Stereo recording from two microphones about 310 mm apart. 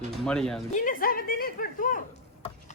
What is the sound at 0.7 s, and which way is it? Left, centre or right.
Speech, left.